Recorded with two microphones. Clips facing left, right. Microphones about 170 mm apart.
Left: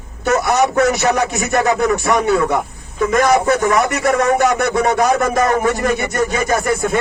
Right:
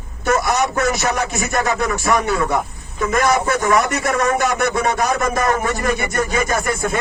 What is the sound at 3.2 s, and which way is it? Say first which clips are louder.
Speech: left 3 dB; 60° left (ahead or behind).